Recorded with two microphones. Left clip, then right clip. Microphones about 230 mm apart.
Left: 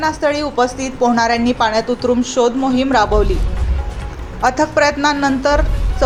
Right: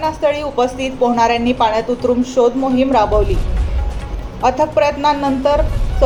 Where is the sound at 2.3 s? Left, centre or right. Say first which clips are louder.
Right 3 dB; left.